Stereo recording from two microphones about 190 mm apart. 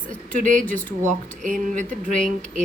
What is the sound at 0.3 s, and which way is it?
Speech, 40° right (ahead or behind).